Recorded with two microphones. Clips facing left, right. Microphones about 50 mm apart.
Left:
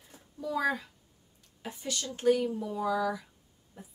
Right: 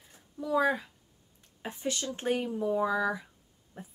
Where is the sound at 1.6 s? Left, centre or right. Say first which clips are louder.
Right 3 dB; right.